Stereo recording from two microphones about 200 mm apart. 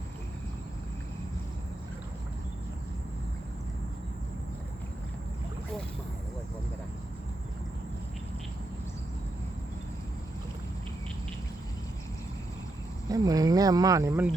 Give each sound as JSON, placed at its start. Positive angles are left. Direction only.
{"t": 13.1, "sound": "speech", "side_deg": -20}